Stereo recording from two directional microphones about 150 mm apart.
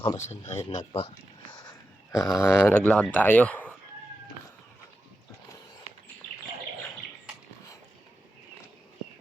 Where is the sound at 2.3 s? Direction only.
15° left (ahead or behind).